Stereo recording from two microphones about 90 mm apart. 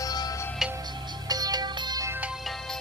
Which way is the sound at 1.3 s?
45° right (ahead or behind).